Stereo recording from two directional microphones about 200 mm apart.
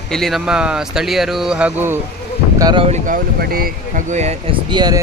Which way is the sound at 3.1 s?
50° right (ahead or behind).